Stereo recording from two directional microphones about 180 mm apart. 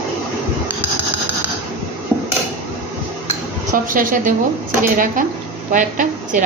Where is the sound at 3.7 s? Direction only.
50° right (ahead or behind).